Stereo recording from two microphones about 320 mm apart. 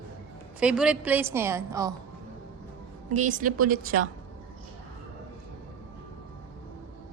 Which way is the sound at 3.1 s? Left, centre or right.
Right.